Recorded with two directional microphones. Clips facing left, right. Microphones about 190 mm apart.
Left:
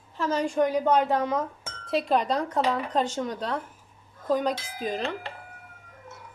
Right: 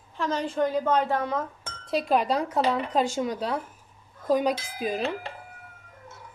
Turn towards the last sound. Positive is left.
turn(degrees=-10)  # may be behind; listen again after turning